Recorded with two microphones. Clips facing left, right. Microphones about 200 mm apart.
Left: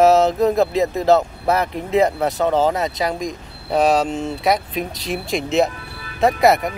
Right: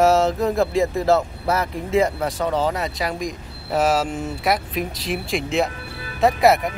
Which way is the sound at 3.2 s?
5° right (ahead or behind).